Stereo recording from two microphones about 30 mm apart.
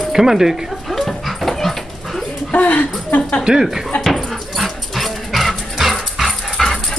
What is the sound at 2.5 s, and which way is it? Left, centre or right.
Speech, left.